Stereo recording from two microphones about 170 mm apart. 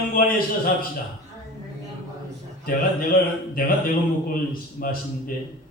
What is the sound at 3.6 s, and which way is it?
A man's voice, 55° left (ahead or behind).